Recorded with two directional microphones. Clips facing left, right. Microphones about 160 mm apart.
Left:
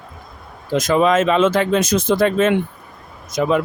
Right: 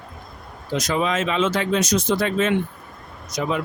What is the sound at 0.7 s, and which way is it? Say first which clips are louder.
Speech: left 7 dB; 50° left (ahead or behind).